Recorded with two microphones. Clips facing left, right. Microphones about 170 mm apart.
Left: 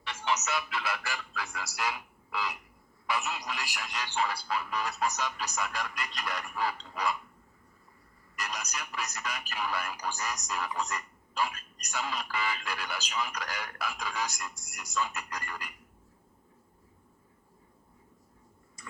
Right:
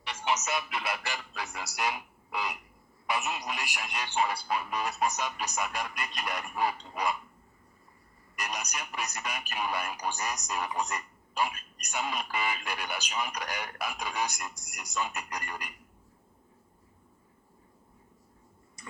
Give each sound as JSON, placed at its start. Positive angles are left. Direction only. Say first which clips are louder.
{"t": 0.0, "sound": "a man's voice", "louder": "right 1 dB", "side_deg": -20}
{"t": 8.4, "sound": "a man's voice", "louder": "right 1 dB", "side_deg": -15}